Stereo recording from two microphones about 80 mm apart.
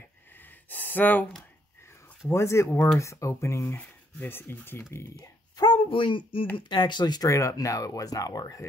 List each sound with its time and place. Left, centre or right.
0.3 s gasp: left
2.2 s speech: left
5.2 s speech: left
6.7 s speech: left
7.2 s speech: left